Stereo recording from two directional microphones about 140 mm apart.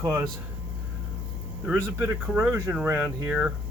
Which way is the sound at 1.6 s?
10° right (ahead or behind).